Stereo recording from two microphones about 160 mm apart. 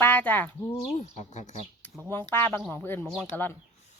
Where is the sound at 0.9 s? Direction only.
45° left (ahead or behind).